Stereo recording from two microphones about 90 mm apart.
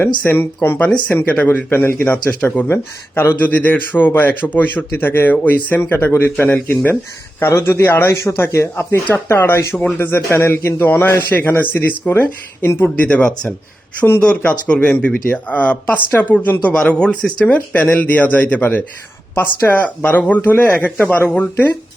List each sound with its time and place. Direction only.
0.3 s a man's voice: 25° left (ahead or behind)
0.9 s a man's voice: 10° left (ahead or behind)